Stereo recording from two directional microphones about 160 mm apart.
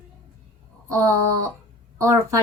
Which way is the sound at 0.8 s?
20° right (ahead or behind).